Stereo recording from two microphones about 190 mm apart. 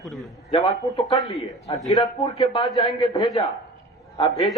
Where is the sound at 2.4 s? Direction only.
25° left (ahead or behind).